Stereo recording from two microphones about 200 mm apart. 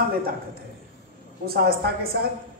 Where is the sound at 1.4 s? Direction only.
50° right (ahead or behind).